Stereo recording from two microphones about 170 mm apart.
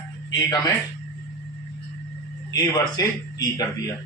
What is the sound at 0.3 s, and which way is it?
Speech, 25° left (ahead or behind).